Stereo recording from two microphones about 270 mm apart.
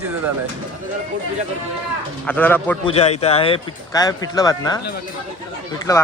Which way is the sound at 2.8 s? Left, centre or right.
Left.